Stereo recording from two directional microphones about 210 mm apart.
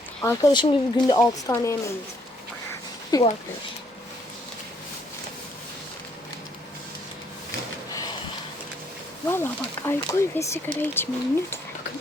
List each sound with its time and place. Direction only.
0.2 s speech: 15° left (ahead or behind)
3.1 s speech: 20° left (ahead or behind)
9.2 s speech: 10° left (ahead or behind)